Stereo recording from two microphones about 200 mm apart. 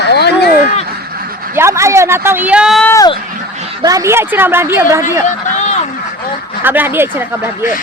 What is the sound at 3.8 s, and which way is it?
Speech, 15° right (ahead or behind).